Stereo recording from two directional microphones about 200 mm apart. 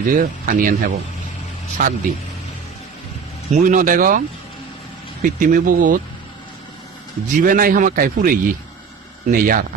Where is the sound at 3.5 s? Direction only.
40° right (ahead or behind).